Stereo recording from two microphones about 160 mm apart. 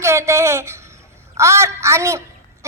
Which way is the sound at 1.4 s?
20° right (ahead or behind).